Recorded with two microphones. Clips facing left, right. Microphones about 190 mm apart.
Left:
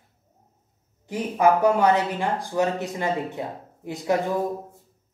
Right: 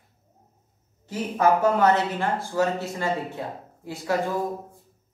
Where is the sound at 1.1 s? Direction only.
15° left (ahead or behind).